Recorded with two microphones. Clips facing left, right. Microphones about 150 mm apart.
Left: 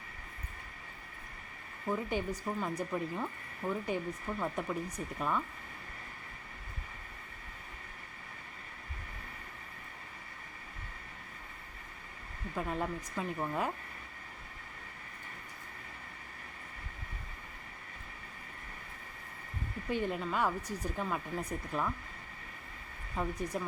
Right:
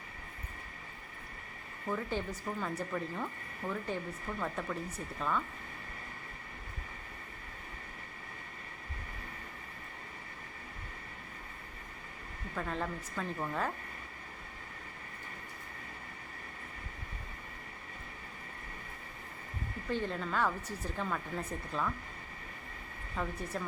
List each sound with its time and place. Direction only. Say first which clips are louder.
1.9 s speech: left 2 dB; 15° left (ahead or behind)
3.6 s speech: left 2 dB; centre (ahead or behind)
4.4 s speech: left 1 dB; 15° left (ahead or behind)
12.5 s speech: left 2 dB; 10° left (ahead or behind)
19.9 s speech: left 1 dB; 10° left (ahead or behind)
23.2 s speech: left 2 dB; 15° left (ahead or behind)